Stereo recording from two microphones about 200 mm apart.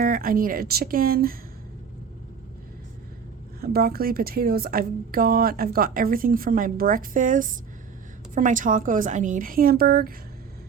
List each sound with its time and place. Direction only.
0.0 s speech: 45° right (ahead or behind)
3.6 s a woman's voice: 50° right (ahead or behind)